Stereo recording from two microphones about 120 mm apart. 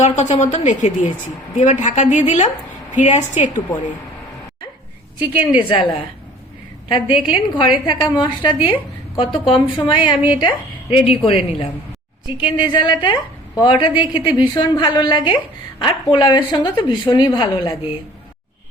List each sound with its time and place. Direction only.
0.0 s a woman's voice: 75° left (ahead or behind)
5.5 s speech: 45° left (ahead or behind)
6.8 s a woman's voice: 40° left (ahead or behind)
12.4 s a woman's voice: 40° left (ahead or behind)